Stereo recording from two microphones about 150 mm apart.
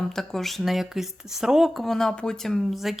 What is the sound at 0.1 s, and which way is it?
Speech, centre (ahead or behind).